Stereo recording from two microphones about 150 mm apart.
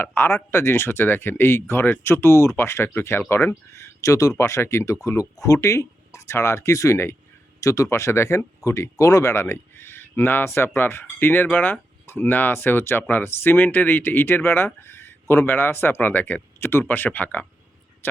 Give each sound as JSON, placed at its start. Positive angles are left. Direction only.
{"t": 0.0, "sound": "speech", "side_deg": 15}